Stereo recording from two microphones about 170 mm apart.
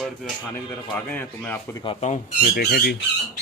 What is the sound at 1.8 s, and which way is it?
Speech, 35° left (ahead or behind).